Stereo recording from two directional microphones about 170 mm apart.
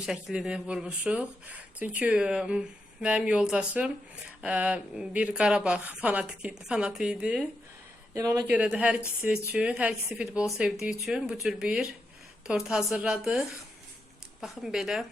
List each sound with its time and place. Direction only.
0.0 s speech: centre (ahead or behind)
8.1 s speech: 20° right (ahead or behind)
8.4 s speech: 5° right (ahead or behind)
14.4 s speech: centre (ahead or behind)